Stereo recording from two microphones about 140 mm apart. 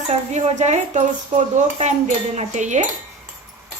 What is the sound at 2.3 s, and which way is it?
Speech, 60° right (ahead or behind).